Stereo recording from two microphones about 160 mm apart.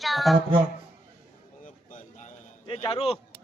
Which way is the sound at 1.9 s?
50° left (ahead or behind).